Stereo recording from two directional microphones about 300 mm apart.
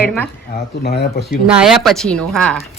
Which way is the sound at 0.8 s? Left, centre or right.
Left.